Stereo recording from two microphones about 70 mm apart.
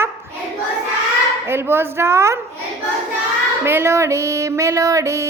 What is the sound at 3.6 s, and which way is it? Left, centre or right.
Music, right.